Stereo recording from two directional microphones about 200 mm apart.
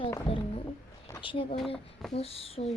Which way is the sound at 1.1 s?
25° left (ahead or behind).